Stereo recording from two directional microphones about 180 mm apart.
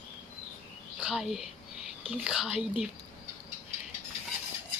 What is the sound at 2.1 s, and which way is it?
Speech, 5° right (ahead or behind).